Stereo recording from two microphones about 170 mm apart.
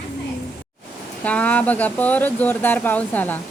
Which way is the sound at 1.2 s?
10° left (ahead or behind).